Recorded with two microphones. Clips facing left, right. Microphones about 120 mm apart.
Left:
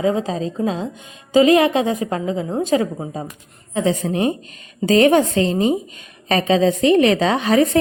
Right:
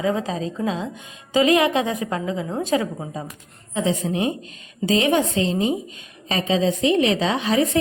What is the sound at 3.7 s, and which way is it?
A woman's voice, 45° left (ahead or behind).